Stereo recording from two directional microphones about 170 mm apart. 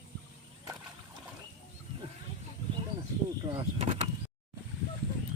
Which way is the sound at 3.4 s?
30° right (ahead or behind).